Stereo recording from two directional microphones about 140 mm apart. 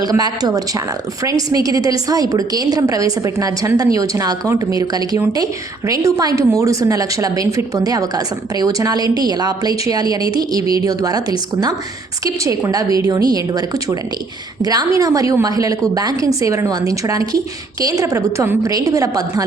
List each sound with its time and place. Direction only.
0.0 s a woman's voice: 25° right (ahead or behind)